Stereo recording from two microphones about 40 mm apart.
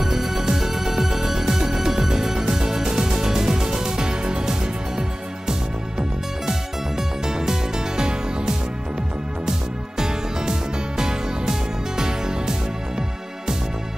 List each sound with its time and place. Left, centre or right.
0.0 s music: centre